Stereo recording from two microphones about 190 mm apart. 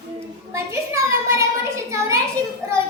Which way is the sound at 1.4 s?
15° right (ahead or behind).